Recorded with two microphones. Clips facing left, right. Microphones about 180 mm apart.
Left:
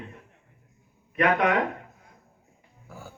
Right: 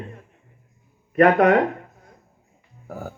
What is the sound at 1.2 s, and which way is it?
Speech, 45° right (ahead or behind).